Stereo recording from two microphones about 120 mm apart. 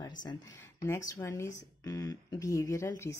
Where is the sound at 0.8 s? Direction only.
25° left (ahead or behind).